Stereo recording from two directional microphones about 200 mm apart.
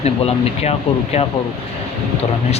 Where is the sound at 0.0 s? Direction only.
30° left (ahead or behind).